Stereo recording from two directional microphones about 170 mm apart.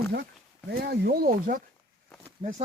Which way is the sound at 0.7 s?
65° right (ahead or behind).